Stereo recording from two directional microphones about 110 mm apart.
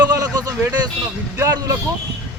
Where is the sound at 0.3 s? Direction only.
35° right (ahead or behind).